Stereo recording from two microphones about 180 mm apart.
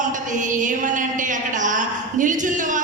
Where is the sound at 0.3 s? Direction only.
45° right (ahead or behind).